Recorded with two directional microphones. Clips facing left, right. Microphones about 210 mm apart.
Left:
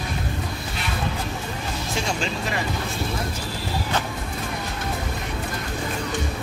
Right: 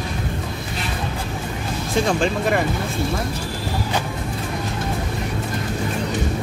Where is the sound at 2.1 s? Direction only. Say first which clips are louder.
Right 9 dB; 55° right (ahead or behind).